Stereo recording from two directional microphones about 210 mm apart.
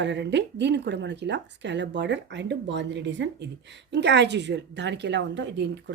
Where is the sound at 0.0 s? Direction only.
55° right (ahead or behind).